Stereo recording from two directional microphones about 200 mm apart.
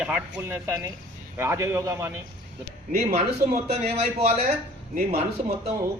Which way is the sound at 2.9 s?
35° right (ahead or behind).